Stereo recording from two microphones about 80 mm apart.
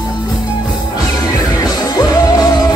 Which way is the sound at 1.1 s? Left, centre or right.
Left.